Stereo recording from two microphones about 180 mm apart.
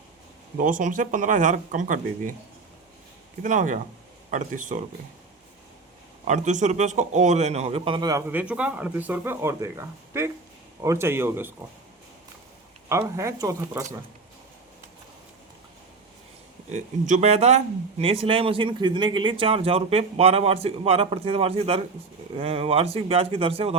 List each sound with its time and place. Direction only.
0.5 s speech: 45° right (ahead or behind)
3.4 s speech: 45° right (ahead or behind)
6.2 s speech: 40° right (ahead or behind); by 8.2 s 25° right (ahead or behind)
8.3 s speech: 10° right (ahead or behind)
12.9 s speech: 15° right (ahead or behind)
16.7 s speech: 40° right (ahead or behind)